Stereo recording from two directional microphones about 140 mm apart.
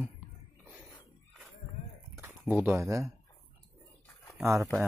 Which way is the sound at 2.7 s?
20° right (ahead or behind).